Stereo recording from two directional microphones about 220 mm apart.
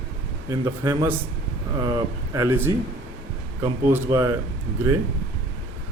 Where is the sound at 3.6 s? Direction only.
10° right (ahead or behind).